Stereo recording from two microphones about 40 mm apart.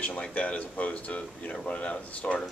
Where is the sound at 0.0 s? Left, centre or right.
Left.